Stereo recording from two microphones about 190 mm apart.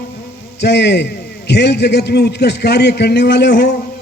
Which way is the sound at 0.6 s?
65° left (ahead or behind).